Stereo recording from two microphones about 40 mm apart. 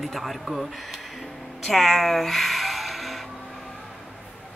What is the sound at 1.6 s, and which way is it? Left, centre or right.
Music, centre.